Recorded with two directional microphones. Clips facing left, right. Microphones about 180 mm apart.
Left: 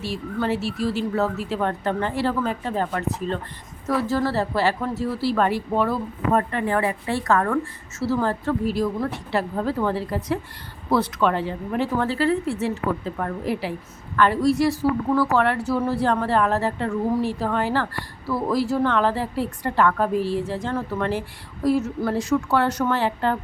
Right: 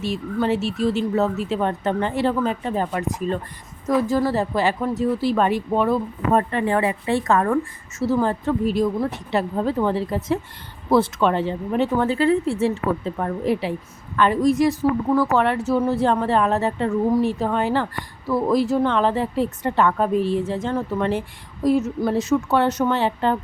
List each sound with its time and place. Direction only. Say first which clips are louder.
0.0 s a woman's voice: right 3 dB; 20° right (ahead or behind)